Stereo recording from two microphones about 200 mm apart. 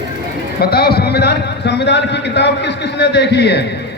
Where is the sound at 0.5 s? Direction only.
50° left (ahead or behind).